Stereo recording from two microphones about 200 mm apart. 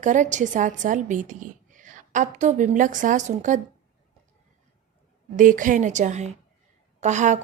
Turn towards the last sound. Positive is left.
turn(degrees=-35)  # may be behind; listen again after turning